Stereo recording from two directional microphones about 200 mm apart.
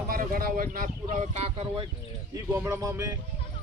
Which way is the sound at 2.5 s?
10° right (ahead or behind).